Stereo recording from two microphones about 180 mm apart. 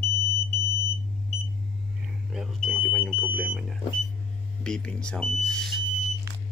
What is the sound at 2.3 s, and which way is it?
Speech, centre (ahead or behind).